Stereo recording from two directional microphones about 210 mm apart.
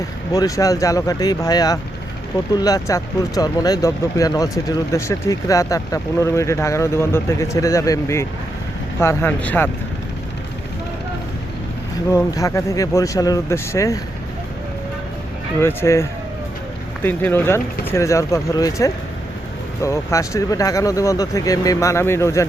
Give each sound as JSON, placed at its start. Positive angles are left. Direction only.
{"t": 0.3, "sound": "speech", "side_deg": 15}
{"t": 12.1, "sound": "speech", "side_deg": 15}
{"t": 15.6, "sound": "speech", "side_deg": 10}